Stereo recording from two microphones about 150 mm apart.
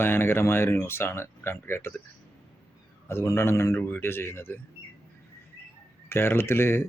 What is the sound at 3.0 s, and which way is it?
Speech, 15° left (ahead or behind).